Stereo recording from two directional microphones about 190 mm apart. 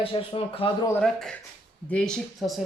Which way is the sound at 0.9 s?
5° left (ahead or behind).